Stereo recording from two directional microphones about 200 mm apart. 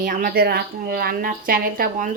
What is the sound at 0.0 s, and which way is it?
A woman's voice, 40° right (ahead or behind).